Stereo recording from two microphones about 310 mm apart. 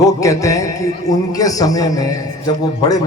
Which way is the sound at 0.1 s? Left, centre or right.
Centre.